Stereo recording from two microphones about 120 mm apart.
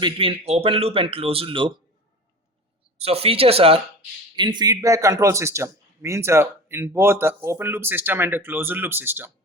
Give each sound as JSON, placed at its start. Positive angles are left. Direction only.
{"t": 0.0, "sound": "a man's voice", "side_deg": -50}
{"t": 3.0, "sound": "a man's voice", "side_deg": -55}
{"t": 4.4, "sound": "speech", "side_deg": -40}